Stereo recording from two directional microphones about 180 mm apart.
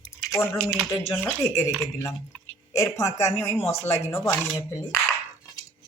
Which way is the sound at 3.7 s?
35° left (ahead or behind).